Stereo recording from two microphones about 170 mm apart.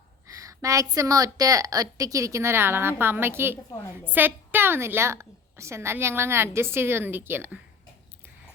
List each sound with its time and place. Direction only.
0.3 s a woman's voice: 20° right (ahead or behind)